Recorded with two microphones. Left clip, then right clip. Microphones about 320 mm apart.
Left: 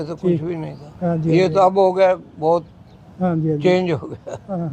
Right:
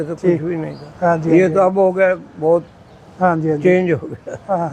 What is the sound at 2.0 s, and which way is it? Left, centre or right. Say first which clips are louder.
Speech: even; left.